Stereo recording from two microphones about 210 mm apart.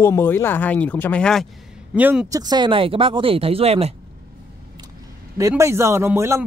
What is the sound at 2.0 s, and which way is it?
Speech, 10° right (ahead or behind).